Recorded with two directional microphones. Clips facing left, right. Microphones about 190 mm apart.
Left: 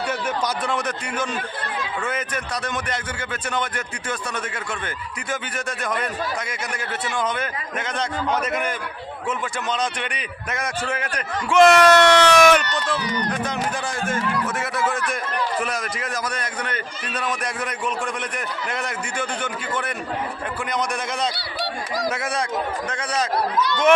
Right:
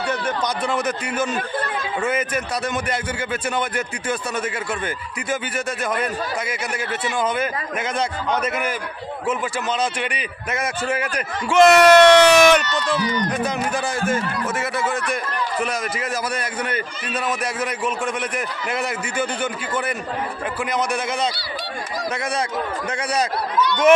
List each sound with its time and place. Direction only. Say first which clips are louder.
0.1 s a man's voice: right 3 dB; 5° left (ahead or behind)
9.7 s a man's voice: right 3 dB; 5° right (ahead or behind)
11.9 s a man's voice: right 4 dB; 15° right (ahead or behind)
12.3 s a man's voice: right 1 dB; centre (ahead or behind)
14.1 s a man's voice: right 1 dB; 5° right (ahead or behind)
22.9 s a man's voice: right 3 dB; 10° right (ahead or behind)